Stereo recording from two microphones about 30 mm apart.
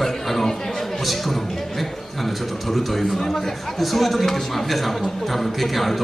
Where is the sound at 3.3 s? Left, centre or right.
Centre.